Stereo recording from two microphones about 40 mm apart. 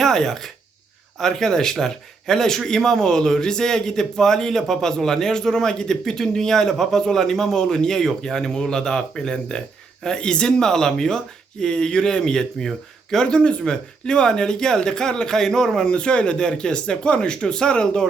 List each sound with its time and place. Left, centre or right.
0.0 s speech: centre